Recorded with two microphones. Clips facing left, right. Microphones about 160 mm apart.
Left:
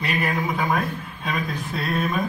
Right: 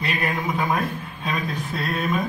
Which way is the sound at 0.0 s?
Centre (ahead or behind).